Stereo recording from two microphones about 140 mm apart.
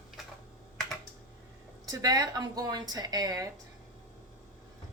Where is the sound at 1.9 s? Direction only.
25° right (ahead or behind).